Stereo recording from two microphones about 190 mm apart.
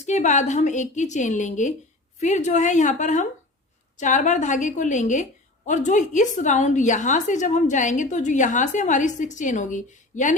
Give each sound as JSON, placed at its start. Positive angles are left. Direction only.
{"t": 0.0, "sound": "a woman's voice", "side_deg": 40}